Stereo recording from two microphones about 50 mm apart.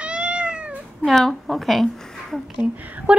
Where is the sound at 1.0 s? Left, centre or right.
Centre.